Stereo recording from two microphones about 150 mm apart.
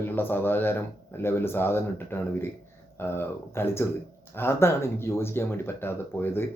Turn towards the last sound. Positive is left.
turn(degrees=15)  # may be behind; listen again after turning